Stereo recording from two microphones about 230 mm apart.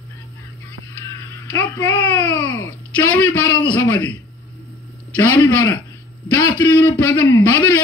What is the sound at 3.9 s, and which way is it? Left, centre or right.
Speech, centre.